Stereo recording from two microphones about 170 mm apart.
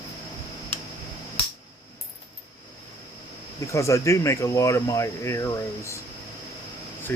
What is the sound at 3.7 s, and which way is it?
Speech, 15° left (ahead or behind).